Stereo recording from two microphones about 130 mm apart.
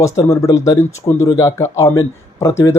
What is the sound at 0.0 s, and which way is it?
Speech, 25° left (ahead or behind).